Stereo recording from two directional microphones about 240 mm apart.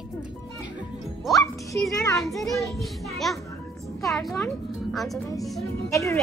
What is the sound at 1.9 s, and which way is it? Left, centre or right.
Speech, centre.